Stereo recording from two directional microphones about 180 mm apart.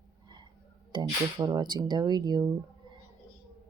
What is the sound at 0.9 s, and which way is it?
Speech, 25° right (ahead or behind).